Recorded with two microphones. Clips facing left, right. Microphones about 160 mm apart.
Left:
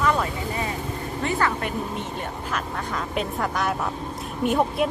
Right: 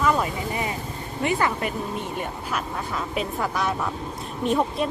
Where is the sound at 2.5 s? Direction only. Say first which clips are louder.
Even; 5° right (ahead or behind).